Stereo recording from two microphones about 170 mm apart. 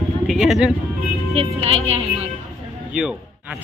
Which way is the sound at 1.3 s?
35° right (ahead or behind).